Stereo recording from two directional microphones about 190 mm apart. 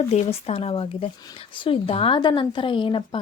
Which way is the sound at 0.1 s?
30° left (ahead or behind).